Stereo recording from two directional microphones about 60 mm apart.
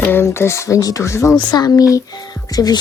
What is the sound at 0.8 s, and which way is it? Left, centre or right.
Speech, left.